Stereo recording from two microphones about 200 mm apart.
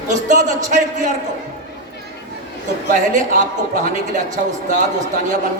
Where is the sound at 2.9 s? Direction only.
40° right (ahead or behind).